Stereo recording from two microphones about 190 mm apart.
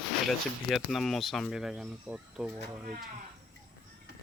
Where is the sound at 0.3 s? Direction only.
Centre (ahead or behind).